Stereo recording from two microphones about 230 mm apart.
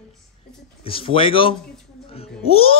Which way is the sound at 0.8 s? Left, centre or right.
Left.